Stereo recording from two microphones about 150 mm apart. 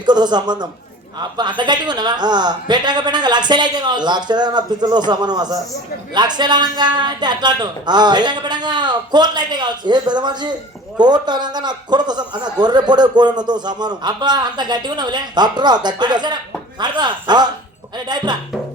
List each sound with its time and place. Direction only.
0.0 s a man's voice: 30° right (ahead or behind)